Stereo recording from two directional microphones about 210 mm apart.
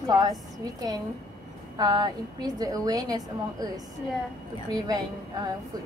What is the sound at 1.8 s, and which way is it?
A woman's voice, 20° right (ahead or behind).